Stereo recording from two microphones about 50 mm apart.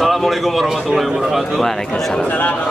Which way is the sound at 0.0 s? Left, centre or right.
Centre.